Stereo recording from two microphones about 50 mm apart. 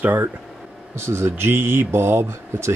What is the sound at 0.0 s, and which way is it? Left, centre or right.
Speech, right.